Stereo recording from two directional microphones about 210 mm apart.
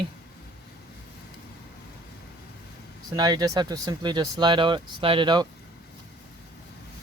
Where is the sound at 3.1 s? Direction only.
20° right (ahead or behind).